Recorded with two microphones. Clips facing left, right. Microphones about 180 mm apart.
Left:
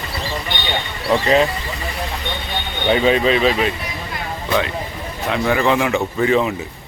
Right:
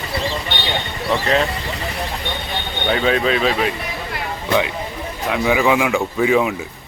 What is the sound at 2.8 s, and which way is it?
Speech, centre (ahead or behind).